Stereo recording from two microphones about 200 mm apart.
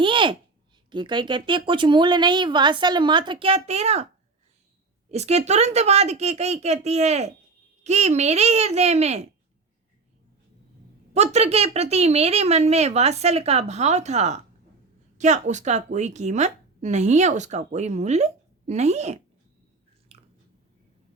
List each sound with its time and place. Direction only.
0.0 s a sound: 25° right (ahead or behind)
0.9 s speech: 25° right (ahead or behind)
5.1 s a woman's voice: 35° right (ahead or behind)
11.1 s a woman's voice: 35° right (ahead or behind)
20.1 s chewing: 30° right (ahead or behind)